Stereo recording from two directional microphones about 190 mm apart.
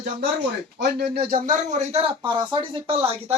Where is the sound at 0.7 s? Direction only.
60° right (ahead or behind); by 3.3 s 30° right (ahead or behind).